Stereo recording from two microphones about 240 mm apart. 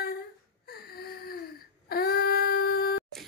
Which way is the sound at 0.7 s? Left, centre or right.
Left.